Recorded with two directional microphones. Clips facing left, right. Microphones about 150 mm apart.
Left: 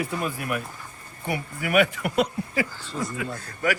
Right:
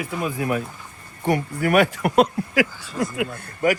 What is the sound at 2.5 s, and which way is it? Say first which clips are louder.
Speech: right 6 dB; 85° right.